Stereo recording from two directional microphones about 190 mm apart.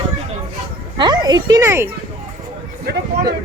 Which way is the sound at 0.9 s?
20° right (ahead or behind).